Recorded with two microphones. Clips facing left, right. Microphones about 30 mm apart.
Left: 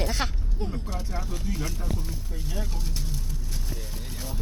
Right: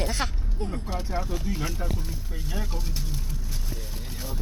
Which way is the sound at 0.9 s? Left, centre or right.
Centre.